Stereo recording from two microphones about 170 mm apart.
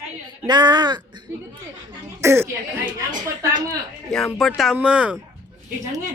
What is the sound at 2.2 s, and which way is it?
Speech, 15° right (ahead or behind).